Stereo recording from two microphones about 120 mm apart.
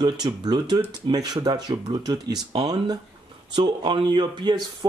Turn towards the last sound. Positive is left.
turn(degrees=-40)  # may be behind; listen again after turning